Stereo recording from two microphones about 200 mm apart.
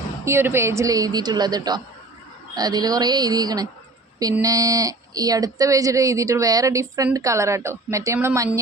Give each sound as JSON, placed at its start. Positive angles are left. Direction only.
{"t": 0.3, "sound": "speech", "side_deg": -10}